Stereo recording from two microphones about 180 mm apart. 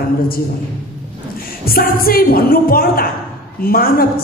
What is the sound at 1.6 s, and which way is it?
A woman's voice, 55° left (ahead or behind).